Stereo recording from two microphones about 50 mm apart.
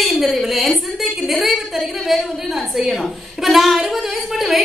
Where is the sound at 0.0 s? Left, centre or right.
Centre.